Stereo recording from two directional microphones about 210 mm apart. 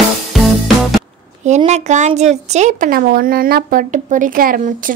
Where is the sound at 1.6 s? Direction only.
30° right (ahead or behind).